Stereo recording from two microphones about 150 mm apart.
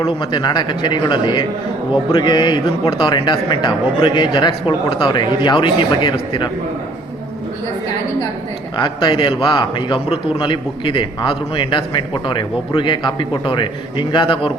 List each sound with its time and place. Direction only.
0.0 s a man's voice: 30° left (ahead or behind)
8.7 s a man's voice: 30° left (ahead or behind)